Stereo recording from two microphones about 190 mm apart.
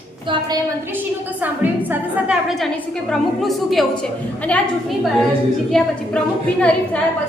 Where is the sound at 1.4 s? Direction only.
10° right (ahead or behind); by 7.0 s 5° left (ahead or behind).